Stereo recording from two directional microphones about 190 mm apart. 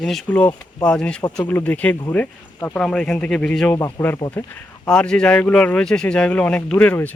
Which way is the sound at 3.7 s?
15° left (ahead or behind).